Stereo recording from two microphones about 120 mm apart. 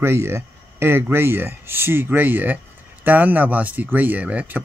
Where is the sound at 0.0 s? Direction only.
20° right (ahead or behind).